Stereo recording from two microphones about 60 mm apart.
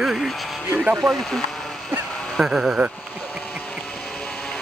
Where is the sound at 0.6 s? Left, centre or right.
Right.